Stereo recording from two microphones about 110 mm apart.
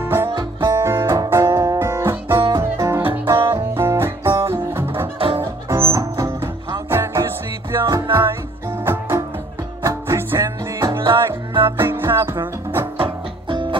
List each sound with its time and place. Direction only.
0.0 s music: 20° right (ahead or behind)
0.3 s music: 40° right (ahead or behind)
0.7 s music: 25° right (ahead or behind)
5.2 s music: 50° right (ahead or behind)
5.7 s music: 25° right (ahead or behind)
8.8 s music: 25° right (ahead or behind)
12.9 s music: 50° right (ahead or behind)